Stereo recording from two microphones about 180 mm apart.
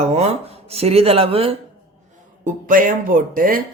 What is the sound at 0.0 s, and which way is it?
Speech, 35° right (ahead or behind).